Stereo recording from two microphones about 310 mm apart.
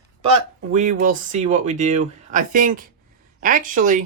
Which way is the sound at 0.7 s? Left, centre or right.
Right.